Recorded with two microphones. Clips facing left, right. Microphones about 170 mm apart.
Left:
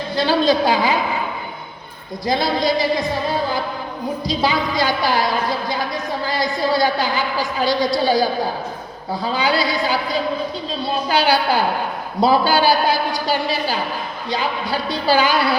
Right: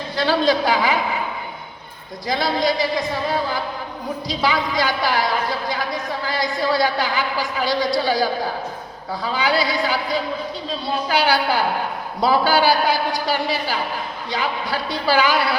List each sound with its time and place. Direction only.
0.2 s a woman's voice: 30° left (ahead or behind)
2.2 s a woman's voice: 30° left (ahead or behind)
4.3 s a woman's voice: 30° left (ahead or behind)
11.1 s a woman's voice: 25° left (ahead or behind)